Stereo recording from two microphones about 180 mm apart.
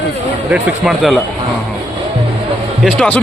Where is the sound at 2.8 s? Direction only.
5° left (ahead or behind).